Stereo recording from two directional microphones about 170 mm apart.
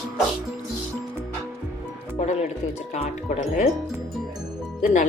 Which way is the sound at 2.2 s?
45° left (ahead or behind).